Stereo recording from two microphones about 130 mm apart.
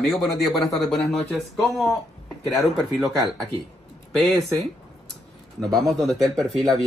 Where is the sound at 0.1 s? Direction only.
Centre (ahead or behind).